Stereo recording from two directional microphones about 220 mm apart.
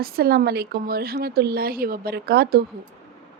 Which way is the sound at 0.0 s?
45° right (ahead or behind).